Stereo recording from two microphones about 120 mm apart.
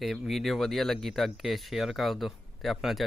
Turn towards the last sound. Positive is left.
turn(degrees=0)  # may be behind; listen again after turning